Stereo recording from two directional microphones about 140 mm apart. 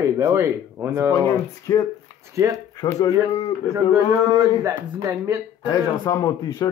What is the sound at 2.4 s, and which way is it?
Speech, 20° right (ahead or behind).